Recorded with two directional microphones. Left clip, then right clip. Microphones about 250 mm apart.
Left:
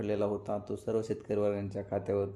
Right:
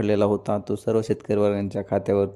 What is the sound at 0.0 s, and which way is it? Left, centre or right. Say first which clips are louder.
A man's voice: right 11 dB; right.